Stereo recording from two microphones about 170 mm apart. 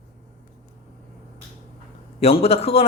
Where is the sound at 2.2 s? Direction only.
35° left (ahead or behind).